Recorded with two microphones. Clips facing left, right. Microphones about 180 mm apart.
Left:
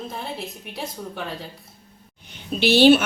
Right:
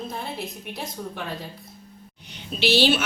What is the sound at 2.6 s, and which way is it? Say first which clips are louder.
Speech: left 6 dB; 50° left (ahead or behind).